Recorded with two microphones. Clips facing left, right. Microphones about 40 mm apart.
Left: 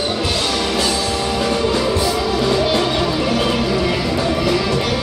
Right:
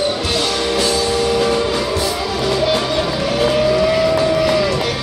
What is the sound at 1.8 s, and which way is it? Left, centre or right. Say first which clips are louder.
Music: left 1 dB; centre.